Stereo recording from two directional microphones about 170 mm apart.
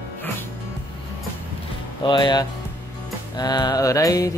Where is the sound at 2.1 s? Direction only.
25° left (ahead or behind).